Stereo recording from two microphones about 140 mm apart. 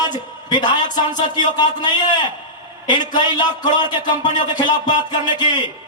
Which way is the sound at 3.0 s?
30° left (ahead or behind).